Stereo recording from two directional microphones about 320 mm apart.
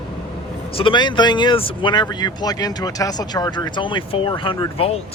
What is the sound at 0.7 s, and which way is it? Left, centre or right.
Speech, centre.